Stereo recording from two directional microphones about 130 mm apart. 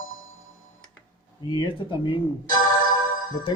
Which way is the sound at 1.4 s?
35° left (ahead or behind).